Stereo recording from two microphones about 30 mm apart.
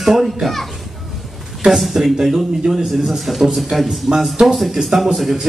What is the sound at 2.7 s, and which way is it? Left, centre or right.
Speech, centre.